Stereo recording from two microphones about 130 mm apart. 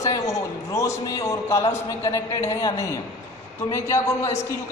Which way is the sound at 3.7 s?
25° left (ahead or behind).